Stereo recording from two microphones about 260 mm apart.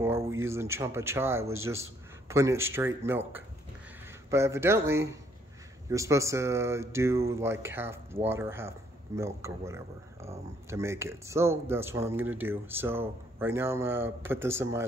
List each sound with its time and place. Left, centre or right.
0.0 s speech: centre